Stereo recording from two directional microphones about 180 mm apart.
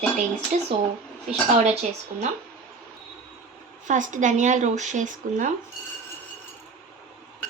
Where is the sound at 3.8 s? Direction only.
45° right (ahead or behind).